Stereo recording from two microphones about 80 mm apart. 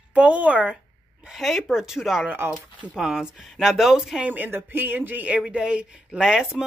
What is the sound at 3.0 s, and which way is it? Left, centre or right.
Speech, centre.